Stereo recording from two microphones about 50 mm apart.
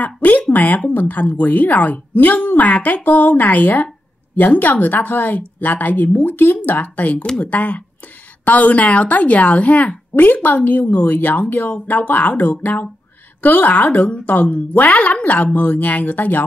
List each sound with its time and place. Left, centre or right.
0.0 s a woman's voice: left